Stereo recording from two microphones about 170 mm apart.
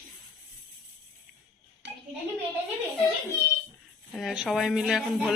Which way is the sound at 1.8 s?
90° right.